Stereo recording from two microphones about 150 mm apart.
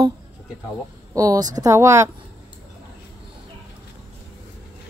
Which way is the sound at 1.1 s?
20° right (ahead or behind).